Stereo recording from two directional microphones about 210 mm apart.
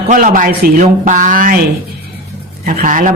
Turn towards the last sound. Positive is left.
turn(degrees=-40)  # may be behind; listen again after turning